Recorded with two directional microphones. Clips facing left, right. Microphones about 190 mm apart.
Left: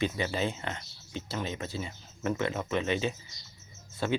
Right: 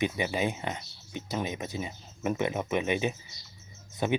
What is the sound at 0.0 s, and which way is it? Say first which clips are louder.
Speech: right 1 dB; 15° right (ahead or behind).